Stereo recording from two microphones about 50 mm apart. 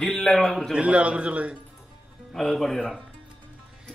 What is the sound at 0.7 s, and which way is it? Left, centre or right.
Speech, right.